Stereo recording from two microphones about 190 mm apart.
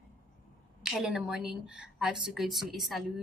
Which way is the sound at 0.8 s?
5° right (ahead or behind).